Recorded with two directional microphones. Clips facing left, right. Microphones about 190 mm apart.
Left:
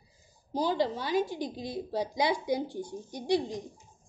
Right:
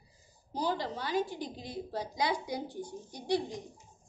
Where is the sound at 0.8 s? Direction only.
15° left (ahead or behind).